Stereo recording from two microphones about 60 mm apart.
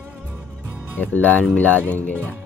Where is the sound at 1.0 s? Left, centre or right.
Left.